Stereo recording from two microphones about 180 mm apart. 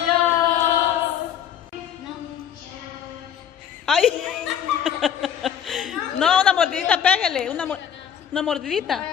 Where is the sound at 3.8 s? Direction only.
5° left (ahead or behind).